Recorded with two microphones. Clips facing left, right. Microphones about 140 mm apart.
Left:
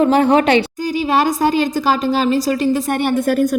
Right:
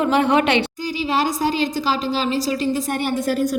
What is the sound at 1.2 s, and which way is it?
A woman's voice, 55° left (ahead or behind).